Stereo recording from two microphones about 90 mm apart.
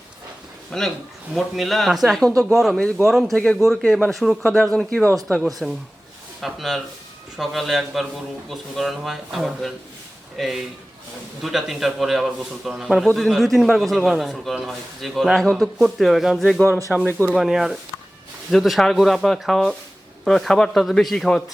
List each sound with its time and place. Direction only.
0.7 s a man's voice: 5° left (ahead or behind)
17.3 s a man's voice: 5° right (ahead or behind)